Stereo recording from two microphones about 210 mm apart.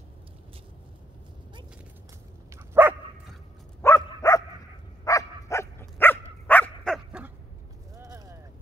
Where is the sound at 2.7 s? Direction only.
10° right (ahead or behind).